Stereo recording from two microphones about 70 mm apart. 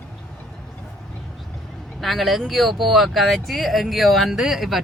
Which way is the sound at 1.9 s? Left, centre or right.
Centre.